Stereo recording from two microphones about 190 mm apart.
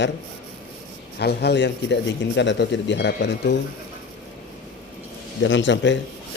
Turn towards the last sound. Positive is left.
turn(degrees=70)  # may be behind; listen again after turning